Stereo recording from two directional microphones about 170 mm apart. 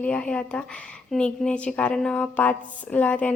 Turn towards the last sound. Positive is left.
turn(degrees=10)  # may be behind; listen again after turning